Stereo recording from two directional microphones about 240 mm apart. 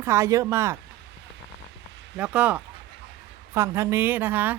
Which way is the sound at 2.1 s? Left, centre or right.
Centre.